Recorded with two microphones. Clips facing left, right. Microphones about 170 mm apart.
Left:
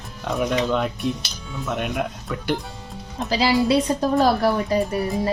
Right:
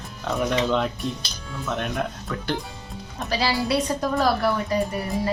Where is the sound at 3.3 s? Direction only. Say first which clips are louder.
Left 5 dB; 20° left (ahead or behind).